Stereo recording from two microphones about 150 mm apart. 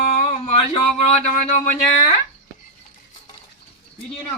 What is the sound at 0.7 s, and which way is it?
Speech, 45° left (ahead or behind).